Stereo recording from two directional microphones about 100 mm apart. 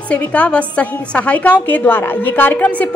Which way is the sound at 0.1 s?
15° left (ahead or behind).